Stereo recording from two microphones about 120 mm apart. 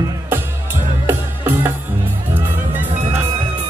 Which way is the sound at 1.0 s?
15° right (ahead or behind).